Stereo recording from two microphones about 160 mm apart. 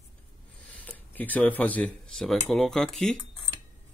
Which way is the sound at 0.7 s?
10° left (ahead or behind).